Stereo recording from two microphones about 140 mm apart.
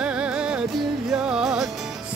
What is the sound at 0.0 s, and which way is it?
Music, 5° right (ahead or behind).